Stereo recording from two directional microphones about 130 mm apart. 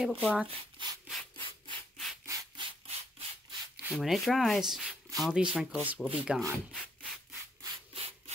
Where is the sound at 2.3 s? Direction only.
25° right (ahead or behind).